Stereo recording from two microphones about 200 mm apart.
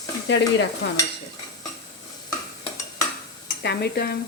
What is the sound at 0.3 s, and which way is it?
Stir, 60° left (ahead or behind).